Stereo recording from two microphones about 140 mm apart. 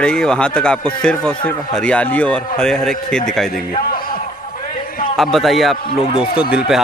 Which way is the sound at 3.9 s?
90° left.